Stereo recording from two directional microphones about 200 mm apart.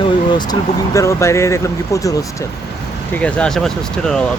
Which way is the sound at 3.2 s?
5° left (ahead or behind).